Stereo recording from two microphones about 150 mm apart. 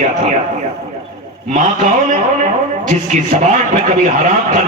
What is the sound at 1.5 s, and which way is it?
A man's voice, 55° right (ahead or behind).